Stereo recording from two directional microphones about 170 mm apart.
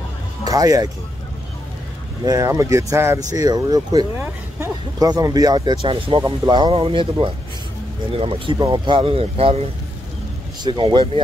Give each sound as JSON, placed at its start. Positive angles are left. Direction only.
{"t": 0.5, "sound": "speech", "side_deg": -20}
{"t": 2.2, "sound": "speech", "side_deg": -20}